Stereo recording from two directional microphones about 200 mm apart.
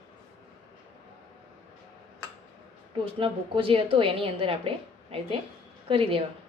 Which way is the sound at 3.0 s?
25° right (ahead or behind).